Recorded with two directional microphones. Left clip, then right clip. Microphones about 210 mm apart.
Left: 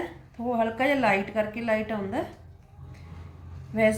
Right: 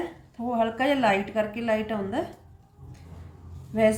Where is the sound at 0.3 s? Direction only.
Centre (ahead or behind).